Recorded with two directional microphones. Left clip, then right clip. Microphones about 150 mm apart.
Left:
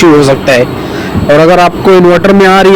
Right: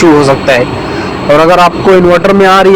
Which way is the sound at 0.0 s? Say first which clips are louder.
Left 1 dB; 70° left (ahead or behind).